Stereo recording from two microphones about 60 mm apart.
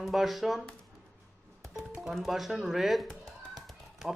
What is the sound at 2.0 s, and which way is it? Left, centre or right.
A man's voice, centre.